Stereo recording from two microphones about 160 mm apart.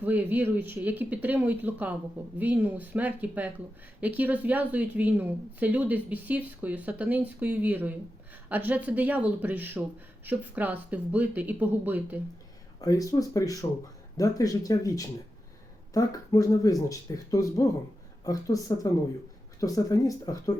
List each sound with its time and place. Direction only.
0.0 s a woman's voice: 10° right (ahead or behind)
12.8 s speech: 20° left (ahead or behind)